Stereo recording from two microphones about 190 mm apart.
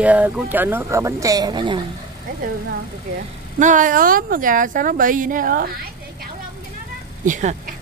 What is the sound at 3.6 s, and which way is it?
Speech, 45° right (ahead or behind).